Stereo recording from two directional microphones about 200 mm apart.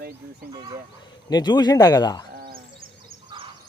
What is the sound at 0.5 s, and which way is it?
Speech, 20° right (ahead or behind).